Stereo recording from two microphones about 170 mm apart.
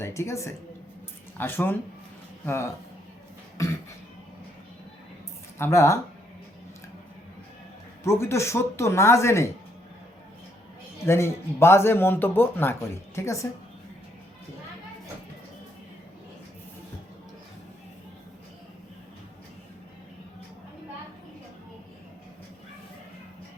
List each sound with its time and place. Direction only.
0.0 s a man's voice: 15° left (ahead or behind)
5.5 s a man's voice: 15° left (ahead or behind)
8.0 s a man's voice: 15° left (ahead or behind)
11.0 s a man's voice: 15° left (ahead or behind)